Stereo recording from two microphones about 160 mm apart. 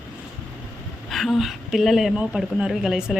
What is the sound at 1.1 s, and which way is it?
A woman's voice, centre (ahead or behind).